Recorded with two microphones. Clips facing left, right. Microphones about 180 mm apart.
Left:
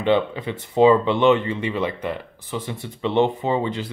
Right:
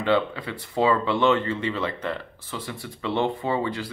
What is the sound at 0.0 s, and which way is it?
Speech, 20° left (ahead or behind).